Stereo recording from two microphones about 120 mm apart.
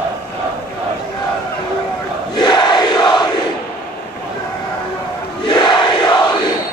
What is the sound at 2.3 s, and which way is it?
Crowd, 40° left (ahead or behind).